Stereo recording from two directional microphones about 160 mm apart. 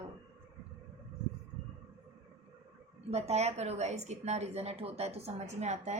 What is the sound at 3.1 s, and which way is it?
A woman's voice, 40° right (ahead or behind).